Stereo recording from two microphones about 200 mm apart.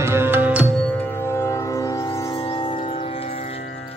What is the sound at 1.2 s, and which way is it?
Music, 15° left (ahead or behind).